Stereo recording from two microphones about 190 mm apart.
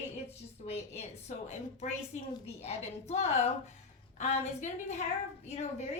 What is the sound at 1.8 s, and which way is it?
A woman's voice, 35° left (ahead or behind).